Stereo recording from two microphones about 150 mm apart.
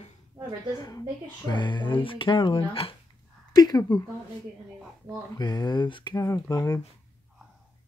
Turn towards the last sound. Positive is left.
turn(degrees=25)  # may be behind; listen again after turning